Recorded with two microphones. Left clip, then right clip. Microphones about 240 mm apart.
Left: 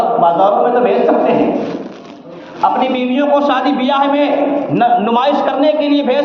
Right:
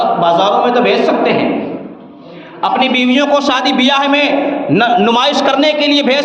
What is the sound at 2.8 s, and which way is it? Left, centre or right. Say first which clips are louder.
A man's voice: right 3 dB; right.